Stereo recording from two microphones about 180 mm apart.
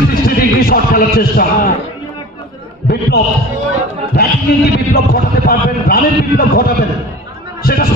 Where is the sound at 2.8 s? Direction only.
65° left (ahead or behind).